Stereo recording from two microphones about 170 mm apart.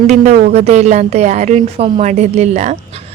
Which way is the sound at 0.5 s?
40° right (ahead or behind).